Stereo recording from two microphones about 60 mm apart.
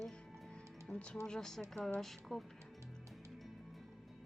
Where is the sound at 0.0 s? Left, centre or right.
Centre.